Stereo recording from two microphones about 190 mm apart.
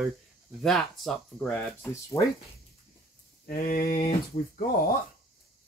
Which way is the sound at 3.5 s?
50° left (ahead or behind).